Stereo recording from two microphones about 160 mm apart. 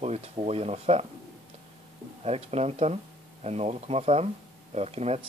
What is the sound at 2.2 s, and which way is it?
Speech, 40° right (ahead or behind).